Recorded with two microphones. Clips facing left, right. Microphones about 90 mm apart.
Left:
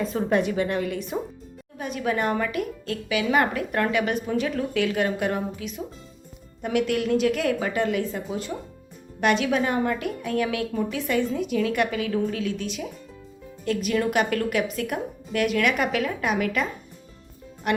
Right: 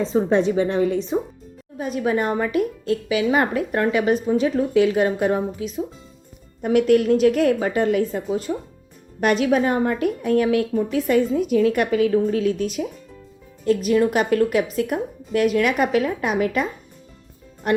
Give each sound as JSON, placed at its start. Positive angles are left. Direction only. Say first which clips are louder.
{"t": 0.0, "sound": "a woman's voice", "louder": "right 5 dB", "side_deg": -25}
{"t": 17.7, "sound": "speech", "louder": "right 4 dB", "side_deg": -30}